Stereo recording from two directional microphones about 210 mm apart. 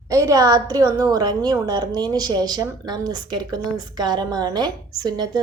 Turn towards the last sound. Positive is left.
turn(degrees=-20)  # may be behind; listen again after turning